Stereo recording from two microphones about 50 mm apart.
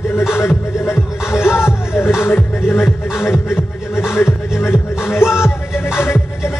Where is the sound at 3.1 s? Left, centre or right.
Left.